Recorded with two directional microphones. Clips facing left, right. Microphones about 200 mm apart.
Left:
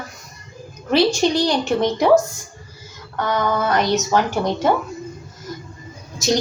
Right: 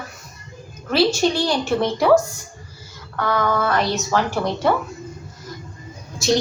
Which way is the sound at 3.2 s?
20° left (ahead or behind).